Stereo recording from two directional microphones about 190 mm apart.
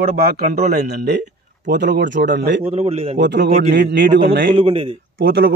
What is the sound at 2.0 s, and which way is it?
Speech, 70° right (ahead or behind).